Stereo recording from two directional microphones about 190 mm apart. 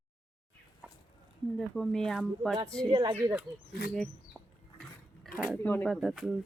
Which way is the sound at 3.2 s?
15° right (ahead or behind).